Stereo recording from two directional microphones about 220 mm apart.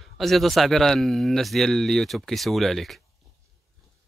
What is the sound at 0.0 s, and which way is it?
Speech, centre (ahead or behind).